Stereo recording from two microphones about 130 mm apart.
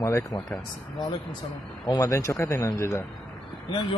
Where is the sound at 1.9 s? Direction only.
25° left (ahead or behind).